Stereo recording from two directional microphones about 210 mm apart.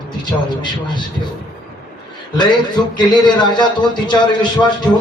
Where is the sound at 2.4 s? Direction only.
20° left (ahead or behind).